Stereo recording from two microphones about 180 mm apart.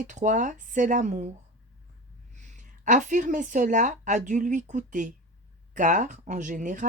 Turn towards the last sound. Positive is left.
turn(degrees=-45)  # may be behind; listen again after turning